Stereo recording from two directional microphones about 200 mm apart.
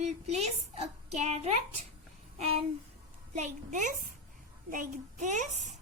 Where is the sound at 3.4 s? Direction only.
40° right (ahead or behind).